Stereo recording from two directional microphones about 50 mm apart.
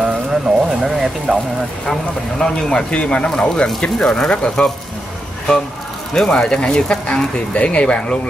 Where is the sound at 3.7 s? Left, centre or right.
Centre.